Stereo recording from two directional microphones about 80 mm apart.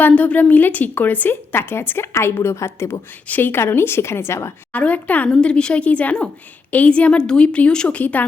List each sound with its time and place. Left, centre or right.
0.0 s a woman's voice: centre
3.2 s a woman's voice: left
4.7 s a woman's voice: centre